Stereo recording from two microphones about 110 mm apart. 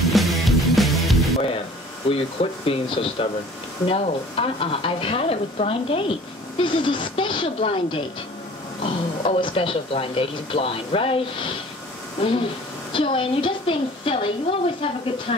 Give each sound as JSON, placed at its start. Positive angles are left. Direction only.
{"t": 0.0, "sound": "music", "side_deg": 0}
{"t": 2.0, "sound": "speech", "side_deg": 55}
{"t": 6.6, "sound": "a woman's voice", "side_deg": 50}